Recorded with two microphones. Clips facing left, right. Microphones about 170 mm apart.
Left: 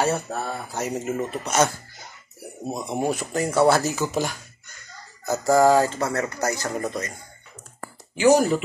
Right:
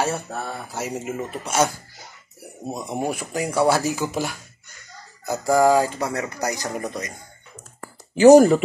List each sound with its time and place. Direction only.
0.1 s speech: centre (ahead or behind)
2.8 s speech: 10° right (ahead or behind)
8.1 s speech: 40° right (ahead or behind)